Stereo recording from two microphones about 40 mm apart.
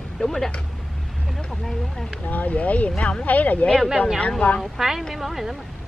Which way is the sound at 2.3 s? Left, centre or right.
Left.